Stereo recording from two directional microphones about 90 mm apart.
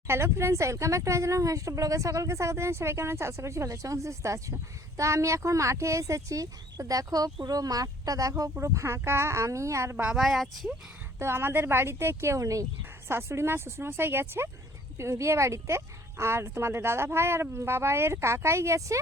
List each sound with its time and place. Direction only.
0.1 s speech: 30° right (ahead or behind)
10.2 s speech: centre (ahead or behind)
11.2 s speech: 30° right (ahead or behind)